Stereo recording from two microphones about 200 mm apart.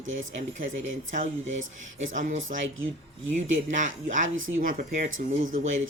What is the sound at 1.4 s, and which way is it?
Speech, 70° right (ahead or behind).